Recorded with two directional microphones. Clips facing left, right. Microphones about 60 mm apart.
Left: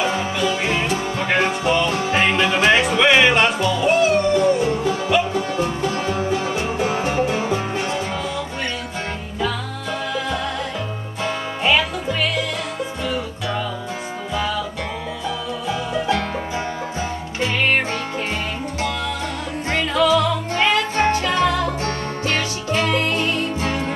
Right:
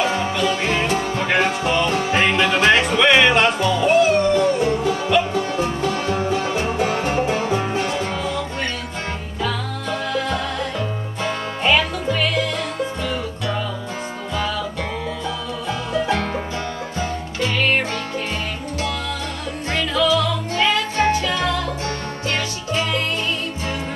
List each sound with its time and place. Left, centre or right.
0.0 s music: centre
9.4 s music: centre
15.9 s music: centre
17.4 s music: centre
19.7 s music: left